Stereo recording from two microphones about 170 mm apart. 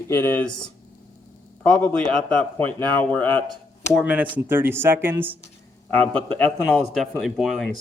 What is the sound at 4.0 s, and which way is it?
Speech, 10° right (ahead or behind).